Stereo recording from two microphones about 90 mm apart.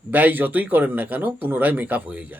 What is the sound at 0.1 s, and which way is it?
A man's voice, 20° right (ahead or behind).